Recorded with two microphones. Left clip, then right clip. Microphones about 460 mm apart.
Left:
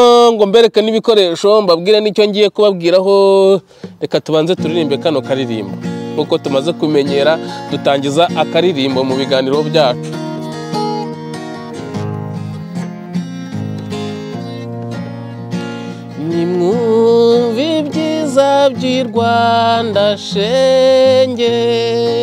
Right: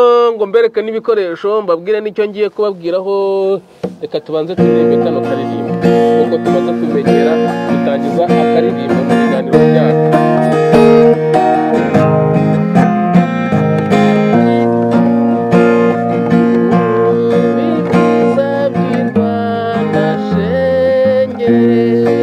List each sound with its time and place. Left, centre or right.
0.0 s a sound: left
0.4 s speech: left
4.7 s music: left
8.2 s music: left
18.3 s music: left
20.5 s music: left